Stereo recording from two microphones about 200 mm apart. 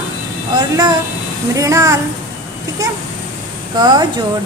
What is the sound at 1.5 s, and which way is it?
A woman's voice, 15° right (ahead or behind).